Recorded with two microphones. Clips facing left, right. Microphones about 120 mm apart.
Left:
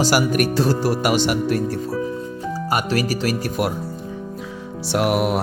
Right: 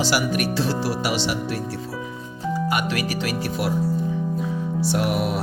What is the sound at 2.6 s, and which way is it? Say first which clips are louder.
Speech: left 7 dB; 40° left (ahead or behind).